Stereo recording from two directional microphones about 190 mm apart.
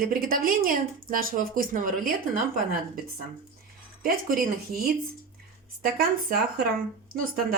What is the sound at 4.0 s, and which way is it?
A woman's voice, 50° right (ahead or behind).